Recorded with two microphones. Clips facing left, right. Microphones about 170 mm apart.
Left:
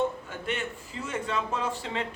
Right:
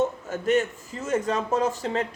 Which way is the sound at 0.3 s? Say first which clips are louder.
Right 10 dB; 40° right (ahead or behind).